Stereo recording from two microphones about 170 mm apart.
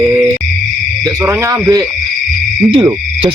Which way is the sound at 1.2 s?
15° right (ahead or behind).